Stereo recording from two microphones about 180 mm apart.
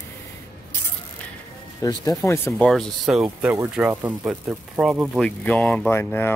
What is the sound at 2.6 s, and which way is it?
Speech, centre (ahead or behind).